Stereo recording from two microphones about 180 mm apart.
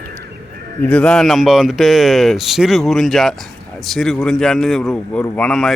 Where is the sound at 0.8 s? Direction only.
5° left (ahead or behind).